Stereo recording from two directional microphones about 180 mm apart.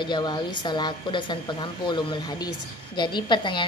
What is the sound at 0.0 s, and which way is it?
Speech, 25° left (ahead or behind).